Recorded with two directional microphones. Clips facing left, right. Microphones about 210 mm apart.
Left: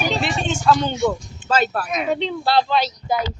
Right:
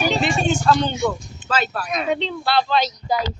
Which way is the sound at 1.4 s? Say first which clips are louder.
Left 3 dB; 50° left (ahead or behind).